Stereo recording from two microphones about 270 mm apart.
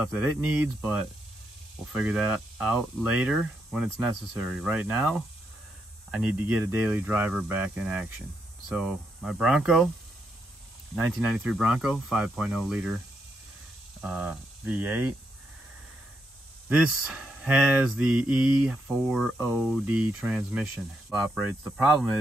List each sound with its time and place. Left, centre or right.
0.0 s speech: centre
11.0 s speech: centre
14.0 s speech: centre
16.6 s speech: centre